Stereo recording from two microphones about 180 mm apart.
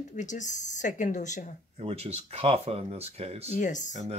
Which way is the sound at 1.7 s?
35° right (ahead or behind).